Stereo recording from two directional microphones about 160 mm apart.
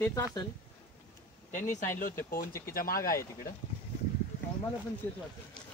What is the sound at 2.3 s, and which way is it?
Speech, 65° left (ahead or behind).